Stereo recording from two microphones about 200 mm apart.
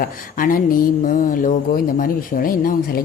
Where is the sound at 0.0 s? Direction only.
45° left (ahead or behind).